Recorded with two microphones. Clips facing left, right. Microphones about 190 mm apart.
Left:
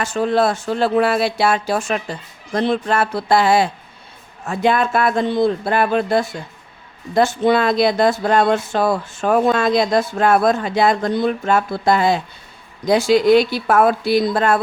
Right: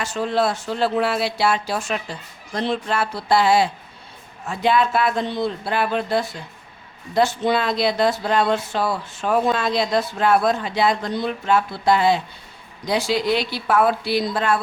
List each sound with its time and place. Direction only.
0.0 s speech: 50° left (ahead or behind)